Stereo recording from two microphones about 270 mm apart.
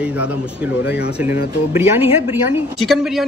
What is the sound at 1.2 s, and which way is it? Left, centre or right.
A man's voice, centre.